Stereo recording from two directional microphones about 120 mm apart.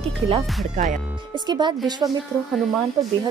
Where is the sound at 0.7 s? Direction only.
90° right.